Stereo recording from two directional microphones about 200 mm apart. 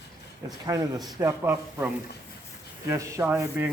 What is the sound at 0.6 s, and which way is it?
Speech, 20° right (ahead or behind).